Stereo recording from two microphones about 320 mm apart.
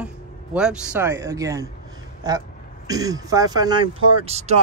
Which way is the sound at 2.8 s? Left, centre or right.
Centre.